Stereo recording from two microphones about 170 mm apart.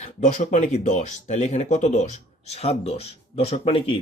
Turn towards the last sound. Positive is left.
turn(degrees=30)  # may be behind; listen again after turning